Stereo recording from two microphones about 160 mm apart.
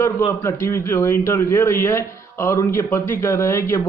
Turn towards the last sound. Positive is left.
turn(degrees=15)  # may be behind; listen again after turning